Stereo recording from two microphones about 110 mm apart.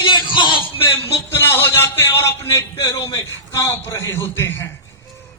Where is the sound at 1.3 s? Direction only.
20° left (ahead or behind).